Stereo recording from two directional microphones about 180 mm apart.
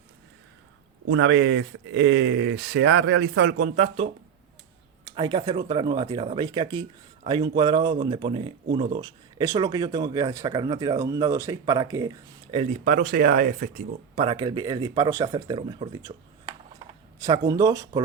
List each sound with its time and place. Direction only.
1.0 s speech: 80° right; by 3.7 s 60° right (ahead or behind)
3.8 s speech: 35° right (ahead or behind)
5.0 s speech: 25° right (ahead or behind)
12.5 s speech: 35° right (ahead or behind)
12.8 s speech: 50° right (ahead or behind)
14.2 s speech: 25° right (ahead or behind)